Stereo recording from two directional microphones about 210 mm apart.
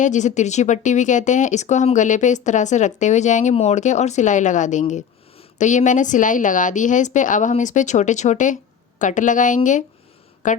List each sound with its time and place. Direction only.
0.0 s speech: 35° left (ahead or behind)